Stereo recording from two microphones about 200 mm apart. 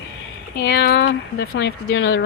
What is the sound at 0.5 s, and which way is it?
Speech, 55° left (ahead or behind).